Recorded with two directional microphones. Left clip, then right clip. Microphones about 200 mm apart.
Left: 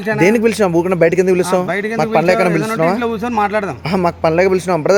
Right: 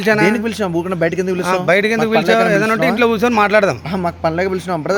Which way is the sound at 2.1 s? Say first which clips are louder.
Left 2 dB; 40° left (ahead or behind).